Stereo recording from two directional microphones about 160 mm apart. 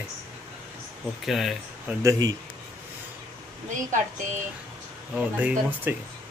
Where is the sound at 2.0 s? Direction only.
20° right (ahead or behind).